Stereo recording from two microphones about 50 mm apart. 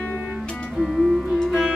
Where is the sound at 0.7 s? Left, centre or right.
Centre.